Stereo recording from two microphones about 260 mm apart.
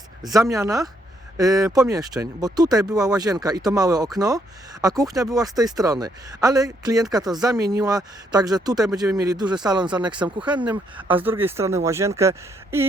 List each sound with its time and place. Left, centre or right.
0.5 s speech: centre